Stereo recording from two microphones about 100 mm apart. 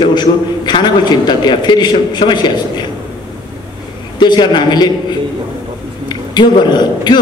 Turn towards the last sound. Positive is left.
turn(degrees=45)  # may be behind; listen again after turning